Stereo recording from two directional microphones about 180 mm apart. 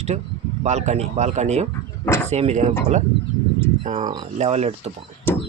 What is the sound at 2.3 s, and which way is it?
Speech, 35° right (ahead or behind).